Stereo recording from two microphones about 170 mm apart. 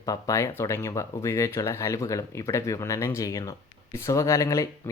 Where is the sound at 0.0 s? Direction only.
20° left (ahead or behind).